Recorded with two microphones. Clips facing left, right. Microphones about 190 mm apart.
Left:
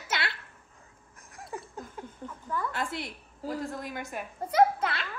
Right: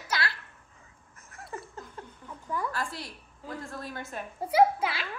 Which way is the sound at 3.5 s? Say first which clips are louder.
Left 4 dB; 15° left (ahead or behind).